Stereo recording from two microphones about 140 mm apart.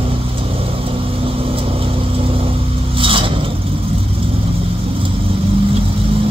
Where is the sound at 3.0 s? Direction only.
40° right (ahead or behind).